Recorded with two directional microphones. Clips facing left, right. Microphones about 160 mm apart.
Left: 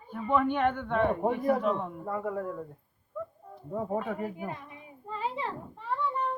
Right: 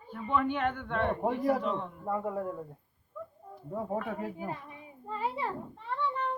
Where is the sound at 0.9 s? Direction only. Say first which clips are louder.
Left 3 dB; 10° left (ahead or behind).